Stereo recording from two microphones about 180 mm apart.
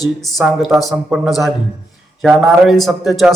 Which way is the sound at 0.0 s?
Centre (ahead or behind).